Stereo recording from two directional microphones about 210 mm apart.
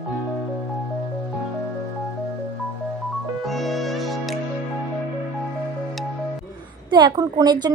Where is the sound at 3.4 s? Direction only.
Centre (ahead or behind).